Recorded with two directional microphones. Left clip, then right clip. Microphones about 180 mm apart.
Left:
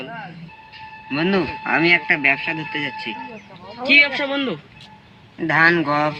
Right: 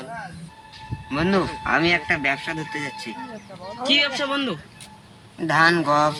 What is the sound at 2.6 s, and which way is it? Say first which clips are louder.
A man's voice: left 4 dB; 15° left (ahead or behind).